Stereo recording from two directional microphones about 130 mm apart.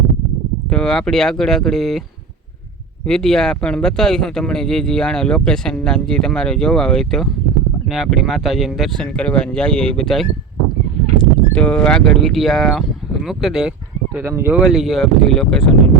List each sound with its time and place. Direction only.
0.7 s speech: 5° left (ahead or behind)
3.1 s speech: 5° left (ahead or behind)
14.2 s speech: 20° right (ahead or behind)
14.5 s speech: 5° right (ahead or behind)